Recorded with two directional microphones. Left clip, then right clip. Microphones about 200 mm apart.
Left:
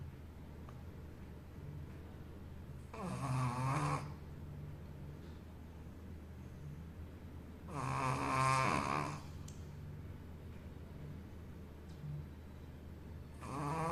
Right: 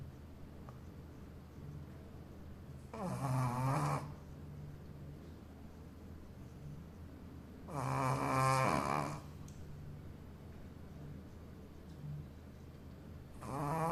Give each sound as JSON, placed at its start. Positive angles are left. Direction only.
{"t": 2.9, "sound": "snoring", "side_deg": -35}
{"t": 7.7, "sound": "a sound", "side_deg": -35}
{"t": 13.5, "sound": "dog", "side_deg": -25}